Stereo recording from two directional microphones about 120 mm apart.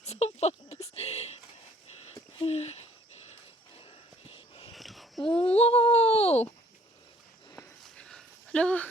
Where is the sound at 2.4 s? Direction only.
60° left (ahead or behind).